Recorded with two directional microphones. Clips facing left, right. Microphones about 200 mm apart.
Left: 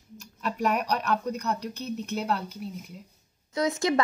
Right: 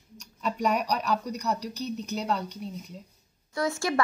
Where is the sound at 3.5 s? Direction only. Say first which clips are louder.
Left 3 dB; 20° left (ahead or behind).